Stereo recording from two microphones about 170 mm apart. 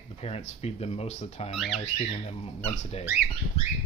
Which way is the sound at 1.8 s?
35° left (ahead or behind).